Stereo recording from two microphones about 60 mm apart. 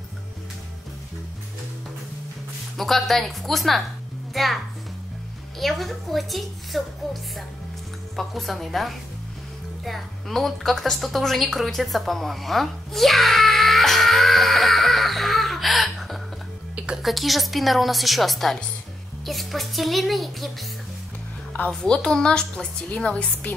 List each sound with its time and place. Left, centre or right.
2.8 s a woman's voice: centre
5.6 s a woman's voice: centre
8.2 s a woman's voice: centre
9.8 s a sound: centre
16.9 s a woman's voice: centre
21.6 s a woman's voice: centre